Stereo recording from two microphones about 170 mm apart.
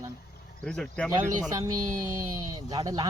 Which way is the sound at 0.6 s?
5° left (ahead or behind).